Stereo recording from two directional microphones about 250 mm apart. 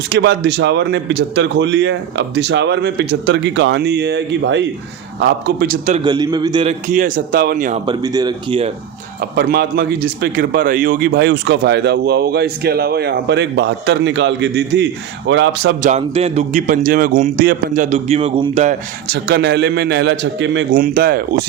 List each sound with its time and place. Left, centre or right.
0.1 s speech: right
6.0 s a man's voice: centre
7.9 s speech: centre
9.3 s speech: right
15.8 s speech: right